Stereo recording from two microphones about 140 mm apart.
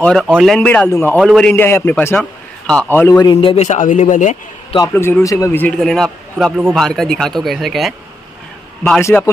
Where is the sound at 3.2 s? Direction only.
35° left (ahead or behind); by 4.4 s 60° left (ahead or behind).